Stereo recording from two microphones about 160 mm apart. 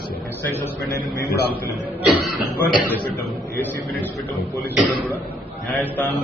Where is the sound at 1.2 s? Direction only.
80° left.